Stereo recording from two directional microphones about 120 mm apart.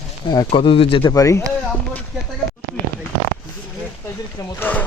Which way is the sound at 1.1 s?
25° left (ahead or behind).